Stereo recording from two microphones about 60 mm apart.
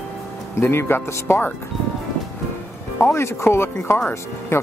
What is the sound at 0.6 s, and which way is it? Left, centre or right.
Speech, left.